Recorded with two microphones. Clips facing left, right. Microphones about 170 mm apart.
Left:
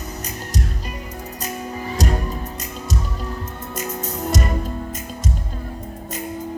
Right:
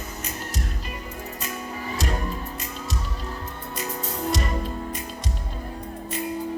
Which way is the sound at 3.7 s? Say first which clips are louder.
Left 3 dB; 45° left (ahead or behind).